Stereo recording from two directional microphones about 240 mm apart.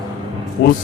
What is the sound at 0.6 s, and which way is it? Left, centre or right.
Speech, left.